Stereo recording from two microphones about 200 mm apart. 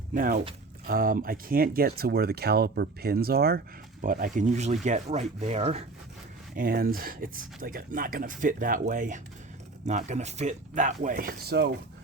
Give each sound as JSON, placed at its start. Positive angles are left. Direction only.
{"t": 0.1, "sound": "speech", "side_deg": -45}
{"t": 6.6, "sound": "speech", "side_deg": -45}